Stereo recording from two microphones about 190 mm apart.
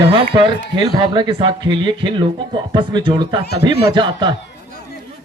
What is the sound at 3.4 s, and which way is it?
Speech, 60° left (ahead or behind).